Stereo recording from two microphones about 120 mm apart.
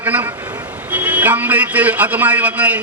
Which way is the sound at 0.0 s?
15° right (ahead or behind).